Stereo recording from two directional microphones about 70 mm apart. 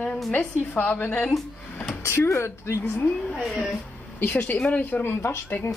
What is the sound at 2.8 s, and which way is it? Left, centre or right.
A woman's voice, left.